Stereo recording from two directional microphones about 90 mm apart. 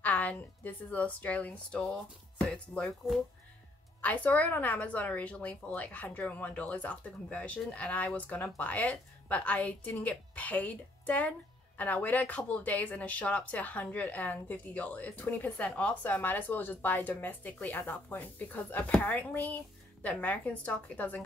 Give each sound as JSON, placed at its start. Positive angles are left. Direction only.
{"t": 0.0, "sound": "a woman's voice", "side_deg": 15}
{"t": 4.0, "sound": "a woman's voice", "side_deg": 15}